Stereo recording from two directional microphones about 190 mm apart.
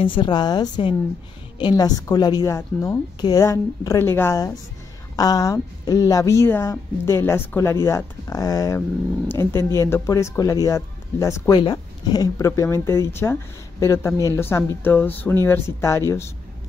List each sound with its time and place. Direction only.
0.0 s a woman's voice: 25° left (ahead or behind)